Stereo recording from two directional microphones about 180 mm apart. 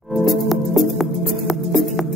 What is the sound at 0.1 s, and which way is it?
Music, centre (ahead or behind).